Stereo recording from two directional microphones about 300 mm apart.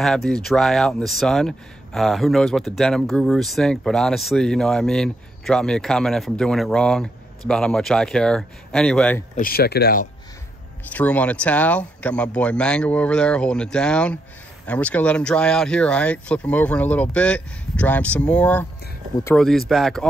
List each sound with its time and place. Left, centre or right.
0.0 s speech: centre
9.3 s speech: left
10.9 s speech: centre